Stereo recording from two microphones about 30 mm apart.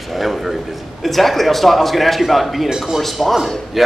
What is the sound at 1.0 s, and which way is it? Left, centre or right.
Speech, centre.